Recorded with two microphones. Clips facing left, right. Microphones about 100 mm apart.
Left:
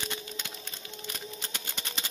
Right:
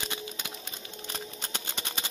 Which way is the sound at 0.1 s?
15° right (ahead or behind).